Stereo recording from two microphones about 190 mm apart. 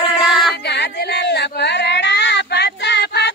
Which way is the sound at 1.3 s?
60° left (ahead or behind).